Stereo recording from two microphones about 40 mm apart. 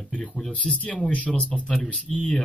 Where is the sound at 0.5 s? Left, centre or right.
Left.